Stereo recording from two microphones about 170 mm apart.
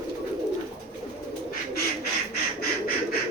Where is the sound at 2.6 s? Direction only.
60° left (ahead or behind).